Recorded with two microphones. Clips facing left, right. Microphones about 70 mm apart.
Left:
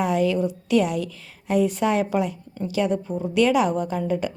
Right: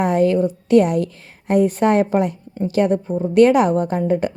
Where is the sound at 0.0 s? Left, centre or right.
Right.